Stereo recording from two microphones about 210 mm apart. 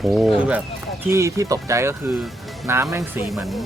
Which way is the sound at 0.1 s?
Centre (ahead or behind).